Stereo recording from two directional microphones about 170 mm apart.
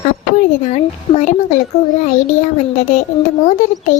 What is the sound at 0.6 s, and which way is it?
Speech, 45° left (ahead or behind).